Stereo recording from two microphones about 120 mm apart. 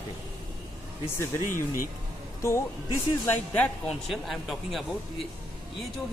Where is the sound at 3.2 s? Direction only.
10° left (ahead or behind).